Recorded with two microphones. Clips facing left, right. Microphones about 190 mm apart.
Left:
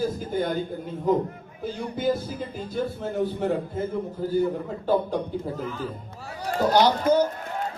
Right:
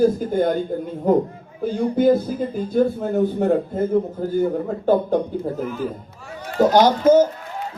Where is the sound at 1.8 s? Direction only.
50° right (ahead or behind).